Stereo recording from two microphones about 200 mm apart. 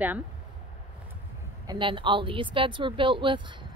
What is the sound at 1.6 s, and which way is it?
A woman's voice, 25° right (ahead or behind).